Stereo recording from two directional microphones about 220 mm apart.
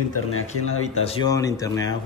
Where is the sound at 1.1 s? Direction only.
20° left (ahead or behind).